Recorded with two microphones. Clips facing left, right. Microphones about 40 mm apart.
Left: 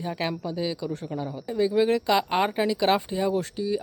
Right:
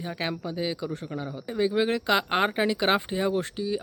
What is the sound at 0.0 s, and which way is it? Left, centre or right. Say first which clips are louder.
Speech: left 2 dB; centre.